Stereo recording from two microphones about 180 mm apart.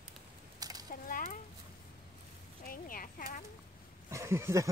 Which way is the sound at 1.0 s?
50° left (ahead or behind).